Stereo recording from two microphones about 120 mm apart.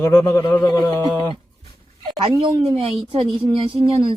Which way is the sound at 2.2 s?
45° right (ahead or behind).